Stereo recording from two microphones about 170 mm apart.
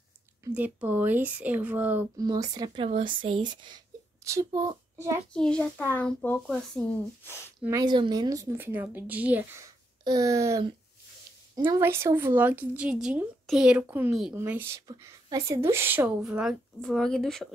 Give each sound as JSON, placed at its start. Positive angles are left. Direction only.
{"t": 0.5, "sound": "speech", "side_deg": -10}
{"t": 2.1, "sound": "a child's voice", "side_deg": -20}
{"t": 5.3, "sound": "a child's voice", "side_deg": 5}
{"t": 7.6, "sound": "speech", "side_deg": -20}
{"t": 10.0, "sound": "speech", "side_deg": -20}